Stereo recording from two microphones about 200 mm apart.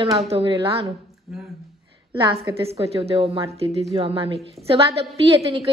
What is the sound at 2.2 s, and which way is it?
A woman's voice, 30° right (ahead or behind).